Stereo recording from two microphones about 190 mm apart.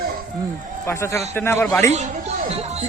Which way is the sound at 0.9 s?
10° left (ahead or behind).